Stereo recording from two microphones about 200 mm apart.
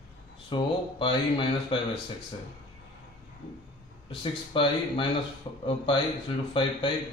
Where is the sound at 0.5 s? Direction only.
25° left (ahead or behind).